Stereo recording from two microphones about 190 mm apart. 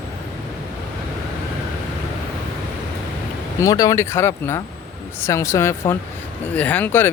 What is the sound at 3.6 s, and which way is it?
Speech, 20° left (ahead or behind).